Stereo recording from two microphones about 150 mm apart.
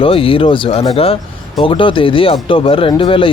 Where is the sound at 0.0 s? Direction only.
35° left (ahead or behind).